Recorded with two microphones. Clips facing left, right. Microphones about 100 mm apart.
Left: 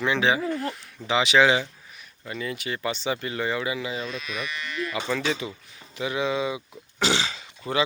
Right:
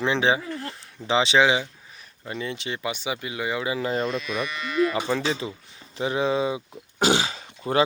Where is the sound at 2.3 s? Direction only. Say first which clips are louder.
Even; 25° right (ahead or behind).